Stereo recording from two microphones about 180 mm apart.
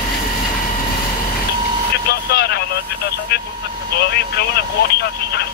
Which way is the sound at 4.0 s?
60° left (ahead or behind).